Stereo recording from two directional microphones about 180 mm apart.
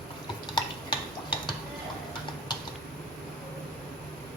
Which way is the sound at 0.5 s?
25° left (ahead or behind).